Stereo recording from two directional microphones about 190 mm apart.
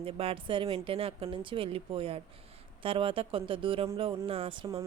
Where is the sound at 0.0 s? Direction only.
30° right (ahead or behind).